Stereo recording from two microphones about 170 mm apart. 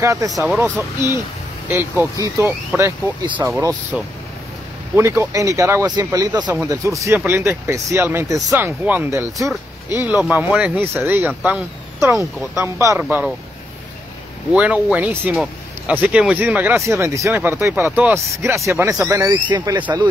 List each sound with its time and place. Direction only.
0.0 s speech: 20° right (ahead or behind)
1.7 s speech: 15° right (ahead or behind)
4.9 s speech: 15° right (ahead or behind)
14.5 s speech: 5° right (ahead or behind); by 19.8 s 20° right (ahead or behind)